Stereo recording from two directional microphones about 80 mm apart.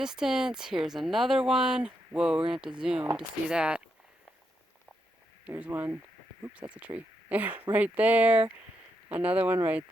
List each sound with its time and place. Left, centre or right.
0.0 s speech: centre
5.5 s speech: centre